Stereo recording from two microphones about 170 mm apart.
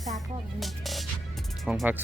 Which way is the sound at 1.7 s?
5° right (ahead or behind).